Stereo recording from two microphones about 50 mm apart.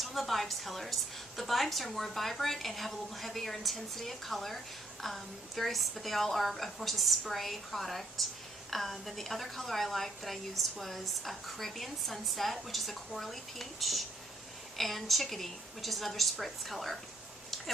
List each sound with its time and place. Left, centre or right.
0.0 s a woman's voice: centre